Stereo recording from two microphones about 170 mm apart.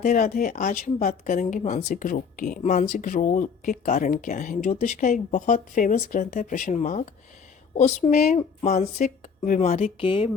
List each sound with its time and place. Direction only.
0.0 s speech: 50° left (ahead or behind); by 10.2 s 35° left (ahead or behind)